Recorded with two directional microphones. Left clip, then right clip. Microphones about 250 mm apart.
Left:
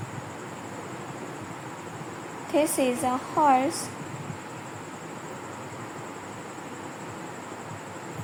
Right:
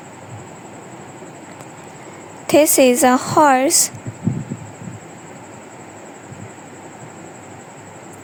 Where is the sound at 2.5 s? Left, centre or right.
Right.